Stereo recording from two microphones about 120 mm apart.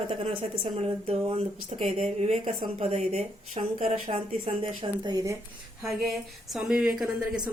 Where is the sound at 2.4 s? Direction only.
75° right (ahead or behind).